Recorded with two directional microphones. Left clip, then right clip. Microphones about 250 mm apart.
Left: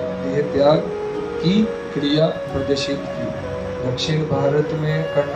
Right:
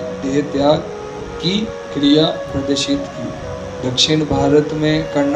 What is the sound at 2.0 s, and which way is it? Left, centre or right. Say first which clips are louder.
Speech: right 8 dB; right.